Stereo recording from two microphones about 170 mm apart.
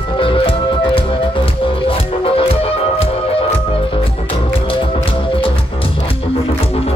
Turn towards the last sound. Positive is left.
turn(degrees=30)  # may be behind; listen again after turning